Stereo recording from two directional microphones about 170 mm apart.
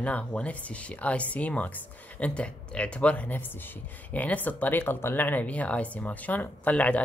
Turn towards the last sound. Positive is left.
turn(degrees=10)  # may be behind; listen again after turning